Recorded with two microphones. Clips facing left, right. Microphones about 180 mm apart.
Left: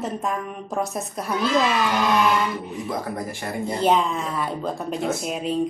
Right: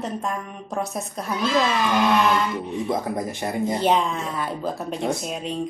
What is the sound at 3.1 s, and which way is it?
Speech, 20° right (ahead or behind).